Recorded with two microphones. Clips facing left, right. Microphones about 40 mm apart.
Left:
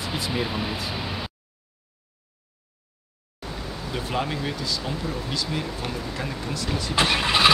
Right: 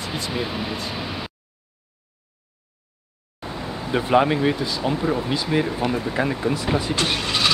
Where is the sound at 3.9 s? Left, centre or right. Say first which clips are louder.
Right 10 dB; right.